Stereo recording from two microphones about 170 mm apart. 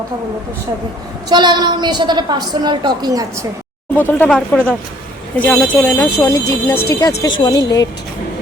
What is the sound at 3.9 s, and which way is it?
Speech, 10° left (ahead or behind).